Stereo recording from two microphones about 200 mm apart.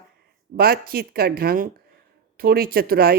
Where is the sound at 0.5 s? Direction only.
50° right (ahead or behind).